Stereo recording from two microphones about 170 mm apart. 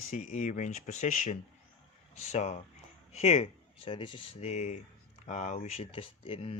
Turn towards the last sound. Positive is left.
turn(degrees=35)  # may be behind; listen again after turning